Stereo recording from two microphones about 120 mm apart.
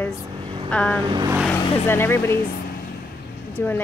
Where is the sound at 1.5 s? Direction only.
20° left (ahead or behind).